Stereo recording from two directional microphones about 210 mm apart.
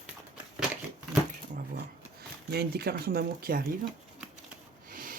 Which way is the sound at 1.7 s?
50° right (ahead or behind).